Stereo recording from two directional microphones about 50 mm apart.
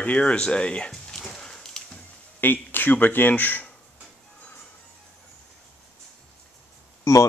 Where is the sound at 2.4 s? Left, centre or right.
Left.